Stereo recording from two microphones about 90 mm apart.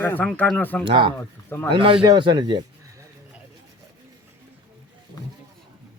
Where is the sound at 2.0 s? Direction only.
55° right (ahead or behind).